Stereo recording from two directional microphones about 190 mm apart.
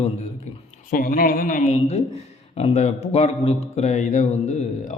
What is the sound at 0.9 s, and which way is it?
A man's voice, 45° left (ahead or behind).